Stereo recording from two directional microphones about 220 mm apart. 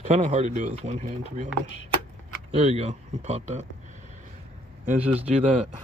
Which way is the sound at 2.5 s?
30° right (ahead or behind).